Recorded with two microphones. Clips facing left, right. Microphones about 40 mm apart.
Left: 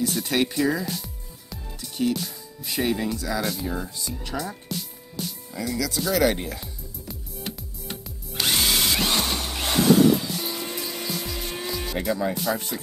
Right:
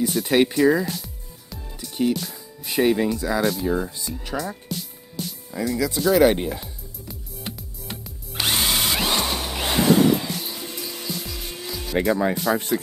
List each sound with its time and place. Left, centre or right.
0.0 s speech: centre
1.8 s music: centre
2.2 s speech: centre
5.8 s speech: right
6.6 s music: centre
10.3 s music: centre
12.0 s speech: right